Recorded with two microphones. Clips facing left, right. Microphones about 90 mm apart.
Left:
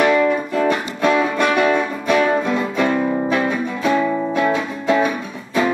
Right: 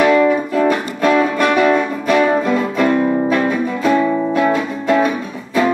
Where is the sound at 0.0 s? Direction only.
Centre (ahead or behind).